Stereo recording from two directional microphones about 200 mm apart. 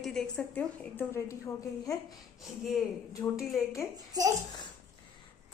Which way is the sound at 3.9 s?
20° right (ahead or behind).